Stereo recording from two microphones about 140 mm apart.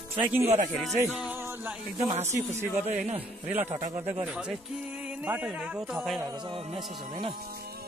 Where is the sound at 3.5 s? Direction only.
15° right (ahead or behind).